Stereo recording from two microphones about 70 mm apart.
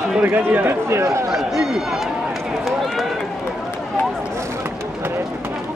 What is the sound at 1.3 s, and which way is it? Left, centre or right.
Speech, centre.